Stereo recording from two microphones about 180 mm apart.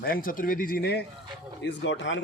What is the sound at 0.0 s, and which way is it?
Speech, 55° left (ahead or behind).